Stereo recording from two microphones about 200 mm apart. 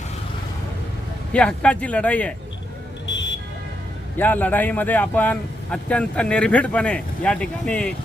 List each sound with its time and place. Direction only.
1.3 s speech: 5° left (ahead or behind)
3.1 s vehicle: 65° left (ahead or behind)
4.2 s speech: 10° left (ahead or behind)